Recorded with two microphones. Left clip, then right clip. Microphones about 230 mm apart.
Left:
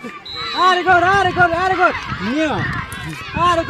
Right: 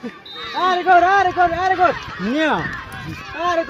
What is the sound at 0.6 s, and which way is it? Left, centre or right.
Speech, left.